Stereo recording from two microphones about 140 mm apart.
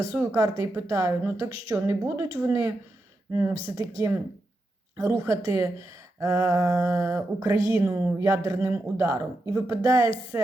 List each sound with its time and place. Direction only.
0.3 s speech: 25° right (ahead or behind)